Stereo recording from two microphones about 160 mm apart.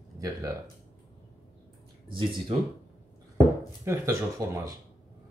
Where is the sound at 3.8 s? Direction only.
20° right (ahead or behind).